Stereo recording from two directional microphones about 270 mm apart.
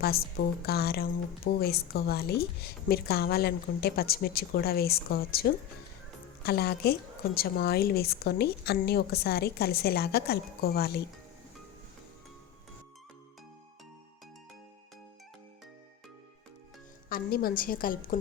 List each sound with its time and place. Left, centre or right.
0.0 s a woman's voice: left
17.1 s a woman's voice: left